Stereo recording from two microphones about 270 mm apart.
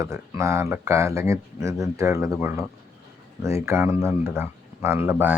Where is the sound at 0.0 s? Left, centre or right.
Centre.